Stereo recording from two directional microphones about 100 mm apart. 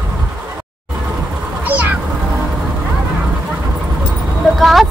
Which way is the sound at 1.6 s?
15° right (ahead or behind).